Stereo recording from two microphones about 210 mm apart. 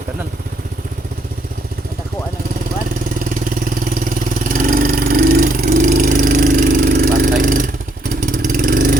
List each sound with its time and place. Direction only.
4.4 s vehicle: 40° right (ahead or behind)